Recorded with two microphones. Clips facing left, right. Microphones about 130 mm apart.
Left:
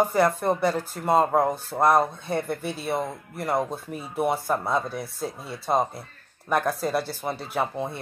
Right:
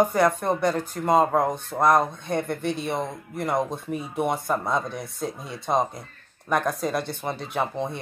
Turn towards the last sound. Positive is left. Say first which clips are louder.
# even
turn(degrees=5)  # may be behind; listen again after turning